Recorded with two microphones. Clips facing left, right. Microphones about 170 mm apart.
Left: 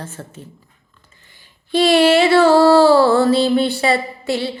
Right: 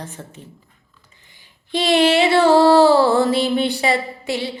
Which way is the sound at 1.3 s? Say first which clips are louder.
Left 4 dB; 15° right (ahead or behind).